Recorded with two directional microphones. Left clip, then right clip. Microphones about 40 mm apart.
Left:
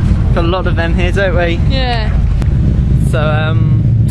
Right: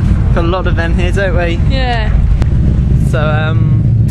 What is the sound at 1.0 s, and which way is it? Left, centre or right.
Speech, left.